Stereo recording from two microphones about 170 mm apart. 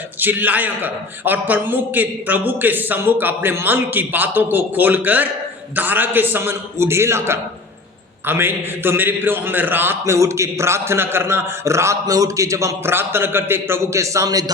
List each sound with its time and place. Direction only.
0.2 s a man's voice: 10° right (ahead or behind)